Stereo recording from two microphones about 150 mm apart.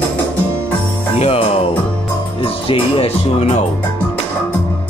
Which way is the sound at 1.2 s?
40° left (ahead or behind).